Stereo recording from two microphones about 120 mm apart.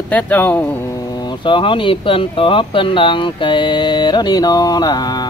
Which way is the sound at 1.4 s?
45° left (ahead or behind).